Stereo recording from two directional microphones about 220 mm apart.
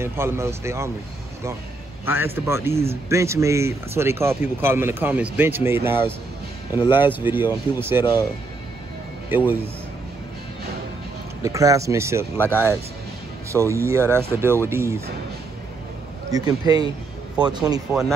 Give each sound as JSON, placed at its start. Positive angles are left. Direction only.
{"t": 0.0, "sound": "speech", "side_deg": -10}
{"t": 2.0, "sound": "speech", "side_deg": -10}
{"t": 9.3, "sound": "speech", "side_deg": -10}
{"t": 11.4, "sound": "speech", "side_deg": -15}
{"t": 12.4, "sound": "speech", "side_deg": 10}
{"t": 13.5, "sound": "speech", "side_deg": -15}
{"t": 16.3, "sound": "speech", "side_deg": -15}